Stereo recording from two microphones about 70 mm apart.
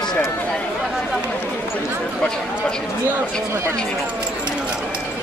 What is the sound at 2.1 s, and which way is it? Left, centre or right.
Speech, centre.